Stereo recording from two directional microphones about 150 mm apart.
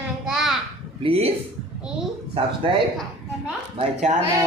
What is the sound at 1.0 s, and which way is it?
Speech, 40° right (ahead or behind).